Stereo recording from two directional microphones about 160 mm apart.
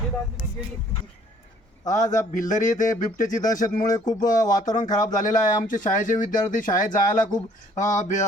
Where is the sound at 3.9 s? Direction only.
25° left (ahead or behind).